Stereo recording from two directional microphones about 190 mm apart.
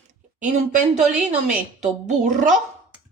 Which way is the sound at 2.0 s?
40° right (ahead or behind).